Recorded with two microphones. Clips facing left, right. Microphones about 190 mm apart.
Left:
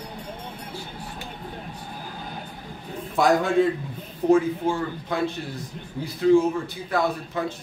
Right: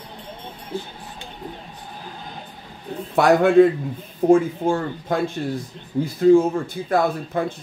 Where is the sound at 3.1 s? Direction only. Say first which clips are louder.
Right 6 dB; 60° right (ahead or behind).